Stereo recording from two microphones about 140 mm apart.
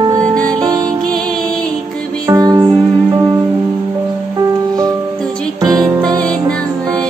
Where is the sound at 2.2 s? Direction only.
25° right (ahead or behind).